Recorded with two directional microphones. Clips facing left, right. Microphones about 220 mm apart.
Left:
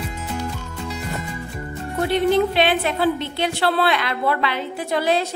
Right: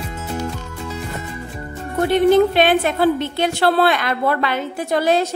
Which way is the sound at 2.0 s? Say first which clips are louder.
Right 5 dB; 50° right (ahead or behind).